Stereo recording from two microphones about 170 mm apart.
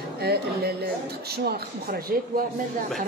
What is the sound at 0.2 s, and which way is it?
Speech, 70° right (ahead or behind).